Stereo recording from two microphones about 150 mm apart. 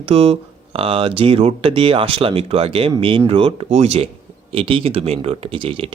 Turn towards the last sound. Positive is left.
turn(degrees=-35)  # may be behind; listen again after turning